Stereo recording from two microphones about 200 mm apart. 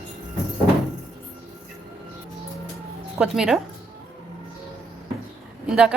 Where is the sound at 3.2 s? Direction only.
5° right (ahead or behind).